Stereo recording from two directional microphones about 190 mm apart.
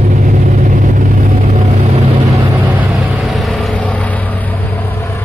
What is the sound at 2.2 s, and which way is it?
Vehicle, 15° right (ahead or behind).